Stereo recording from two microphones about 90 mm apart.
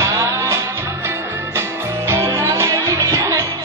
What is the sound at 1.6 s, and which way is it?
Music, 30° right (ahead or behind).